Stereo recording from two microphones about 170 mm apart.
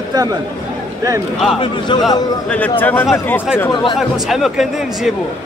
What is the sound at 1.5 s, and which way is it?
Speech, 25° left (ahead or behind).